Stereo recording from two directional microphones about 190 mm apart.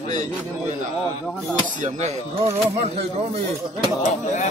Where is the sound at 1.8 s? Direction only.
35° right (ahead or behind).